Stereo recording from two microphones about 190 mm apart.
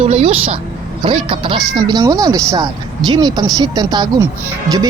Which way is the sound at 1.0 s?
30° right (ahead or behind).